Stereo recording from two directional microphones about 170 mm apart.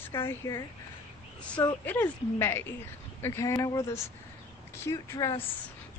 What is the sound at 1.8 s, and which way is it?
Speech, 10° left (ahead or behind).